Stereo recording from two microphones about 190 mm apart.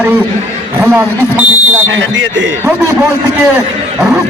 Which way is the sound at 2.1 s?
75° right (ahead or behind).